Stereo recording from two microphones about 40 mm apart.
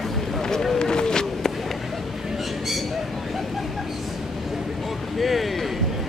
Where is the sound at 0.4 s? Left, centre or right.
Centre.